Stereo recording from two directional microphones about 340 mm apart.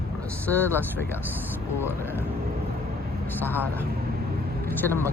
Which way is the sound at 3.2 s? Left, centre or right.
Centre.